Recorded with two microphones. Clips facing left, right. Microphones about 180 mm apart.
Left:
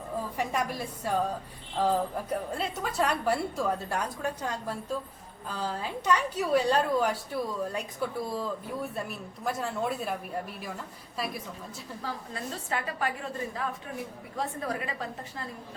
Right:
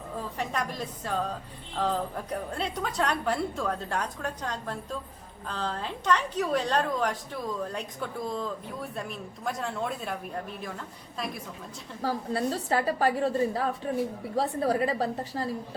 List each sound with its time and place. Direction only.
0.3 s a woman's voice: 10° left (ahead or behind)
12.0 s a woman's voice: 35° right (ahead or behind)